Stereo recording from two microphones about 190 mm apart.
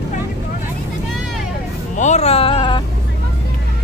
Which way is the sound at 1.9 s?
40° left (ahead or behind).